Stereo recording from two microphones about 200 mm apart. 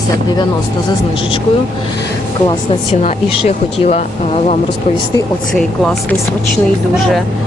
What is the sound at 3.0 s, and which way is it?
Speech, 35° left (ahead or behind).